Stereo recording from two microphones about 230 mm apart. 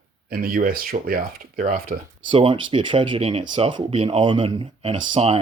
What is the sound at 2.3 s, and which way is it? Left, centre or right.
Speech, right.